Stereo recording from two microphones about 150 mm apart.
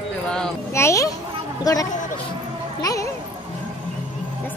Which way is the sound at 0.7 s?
20° left (ahead or behind).